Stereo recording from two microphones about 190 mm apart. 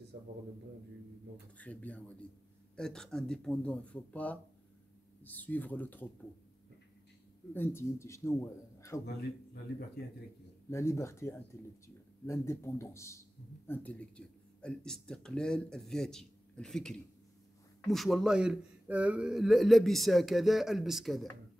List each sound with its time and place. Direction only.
1.6 s a man's voice: 10° left (ahead or behind)
7.5 s a man's voice: 10° left (ahead or behind)
9.0 s a man's voice: 55° left (ahead or behind)
10.7 s a man's voice: 15° left (ahead or behind)